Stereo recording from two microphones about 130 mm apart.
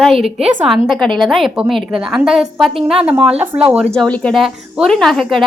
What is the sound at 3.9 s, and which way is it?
A woman's voice, 5° left (ahead or behind).